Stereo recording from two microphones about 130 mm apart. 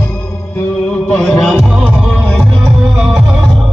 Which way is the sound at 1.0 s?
5° left (ahead or behind).